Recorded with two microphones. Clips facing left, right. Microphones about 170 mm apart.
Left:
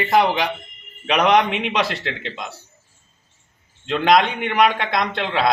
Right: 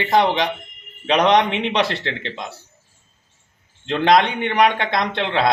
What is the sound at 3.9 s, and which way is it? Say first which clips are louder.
Speech: right 1 dB; 30° right (ahead or behind).